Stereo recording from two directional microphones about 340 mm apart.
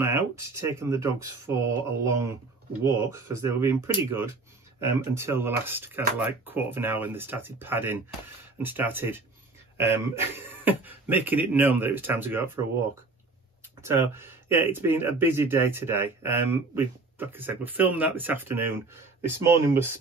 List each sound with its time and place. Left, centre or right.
0.0 s speech: centre
10.3 s speech: centre
13.7 s speech: centre